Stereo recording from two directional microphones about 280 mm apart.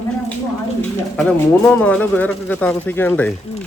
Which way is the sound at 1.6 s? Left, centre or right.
Centre.